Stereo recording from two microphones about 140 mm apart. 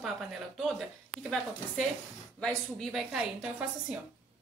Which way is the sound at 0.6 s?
Centre (ahead or behind).